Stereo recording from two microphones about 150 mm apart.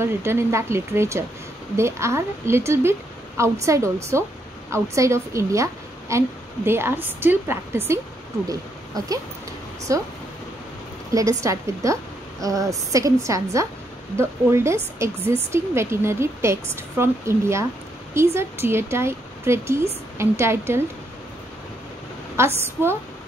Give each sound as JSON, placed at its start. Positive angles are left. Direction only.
{"t": 0.0, "sound": "a woman's voice", "side_deg": -15}
{"t": 11.1, "sound": "a woman's voice", "side_deg": -20}
{"t": 22.4, "sound": "a woman's voice", "side_deg": -15}